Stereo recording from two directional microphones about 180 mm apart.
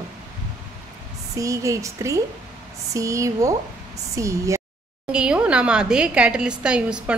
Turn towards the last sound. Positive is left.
turn(degrees=-5)  # may be behind; listen again after turning